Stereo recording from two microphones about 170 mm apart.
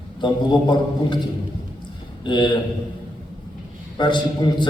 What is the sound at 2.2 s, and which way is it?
Speech, 25° left (ahead or behind).